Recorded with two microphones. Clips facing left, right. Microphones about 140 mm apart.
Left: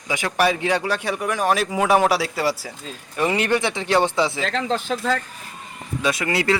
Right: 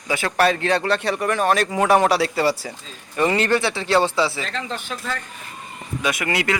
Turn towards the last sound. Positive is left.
turn(degrees=30)  # may be behind; listen again after turning